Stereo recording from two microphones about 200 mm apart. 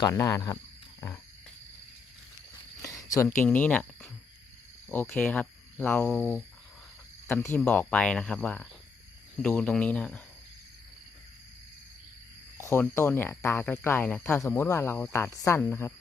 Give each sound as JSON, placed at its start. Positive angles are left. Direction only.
{"t": 0.0, "sound": "speech", "side_deg": 15}
{"t": 2.8, "sound": "a sound", "side_deg": 15}
{"t": 3.4, "sound": "speech", "side_deg": 10}
{"t": 7.4, "sound": "speech", "side_deg": 10}
{"t": 12.5, "sound": "speech", "side_deg": 10}